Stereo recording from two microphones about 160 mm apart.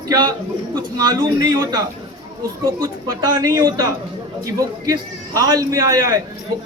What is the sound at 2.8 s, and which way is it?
A man's voice, 25° right (ahead or behind).